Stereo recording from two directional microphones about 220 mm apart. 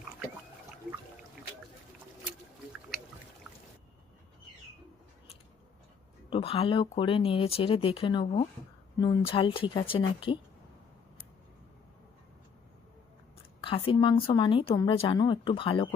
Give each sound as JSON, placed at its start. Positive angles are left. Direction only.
{"t": 6.3, "sound": "speech", "side_deg": 25}
{"t": 13.6, "sound": "speech", "side_deg": 25}